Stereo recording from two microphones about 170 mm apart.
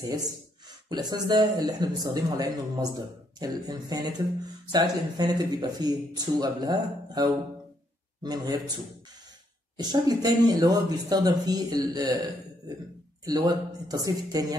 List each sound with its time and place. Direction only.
0.8 s speech: 25° right (ahead or behind)
9.8 s speech: 25° right (ahead or behind)
13.2 s speech: 25° right (ahead or behind)